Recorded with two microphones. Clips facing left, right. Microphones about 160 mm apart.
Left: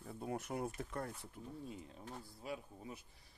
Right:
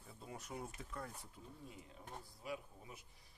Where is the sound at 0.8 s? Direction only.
60° left (ahead or behind).